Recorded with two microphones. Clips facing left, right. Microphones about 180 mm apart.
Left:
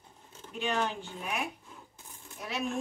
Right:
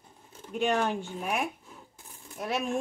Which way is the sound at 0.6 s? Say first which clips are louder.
Right 5 dB; 50° right (ahead or behind).